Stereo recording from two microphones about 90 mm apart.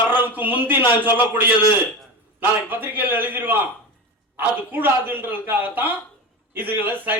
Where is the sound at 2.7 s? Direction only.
20° right (ahead or behind).